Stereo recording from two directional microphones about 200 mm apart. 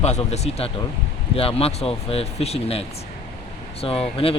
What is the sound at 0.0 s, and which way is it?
Speech, 35° left (ahead or behind).